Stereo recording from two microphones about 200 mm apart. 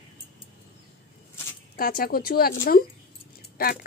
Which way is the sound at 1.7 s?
50° left (ahead or behind).